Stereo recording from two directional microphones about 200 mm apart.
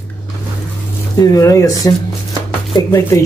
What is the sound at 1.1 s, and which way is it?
Speech, 15° left (ahead or behind).